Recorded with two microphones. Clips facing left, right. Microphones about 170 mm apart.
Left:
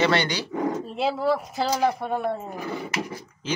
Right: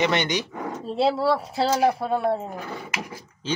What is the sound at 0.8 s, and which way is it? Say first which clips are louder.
Speech: right 8 dB; 35° right (ahead or behind).